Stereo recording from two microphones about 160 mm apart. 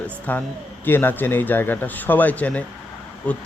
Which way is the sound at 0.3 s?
10° left (ahead or behind).